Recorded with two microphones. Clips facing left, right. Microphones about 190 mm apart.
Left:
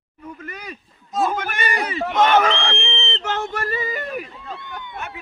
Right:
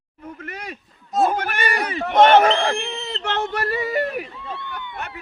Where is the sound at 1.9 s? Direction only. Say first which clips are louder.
Right 4 dB; 60° right (ahead or behind).